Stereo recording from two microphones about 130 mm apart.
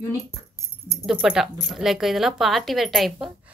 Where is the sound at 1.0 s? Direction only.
5° right (ahead or behind).